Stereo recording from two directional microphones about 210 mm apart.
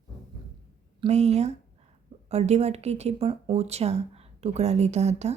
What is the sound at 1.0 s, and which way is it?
A woman's voice, 30° right (ahead or behind).